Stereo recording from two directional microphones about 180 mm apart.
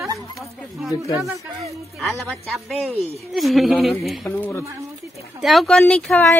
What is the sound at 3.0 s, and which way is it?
Speech, 35° right (ahead or behind).